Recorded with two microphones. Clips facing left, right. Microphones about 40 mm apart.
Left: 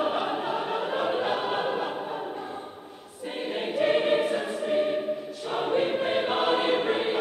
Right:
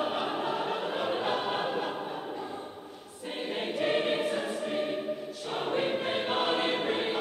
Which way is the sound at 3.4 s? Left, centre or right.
Centre.